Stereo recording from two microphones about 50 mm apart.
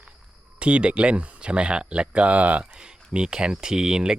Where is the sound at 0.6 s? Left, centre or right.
Right.